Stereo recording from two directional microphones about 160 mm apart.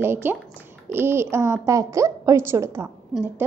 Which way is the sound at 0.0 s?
15° right (ahead or behind).